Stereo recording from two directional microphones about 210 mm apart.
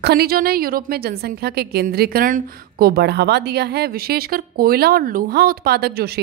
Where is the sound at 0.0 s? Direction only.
50° right (ahead or behind).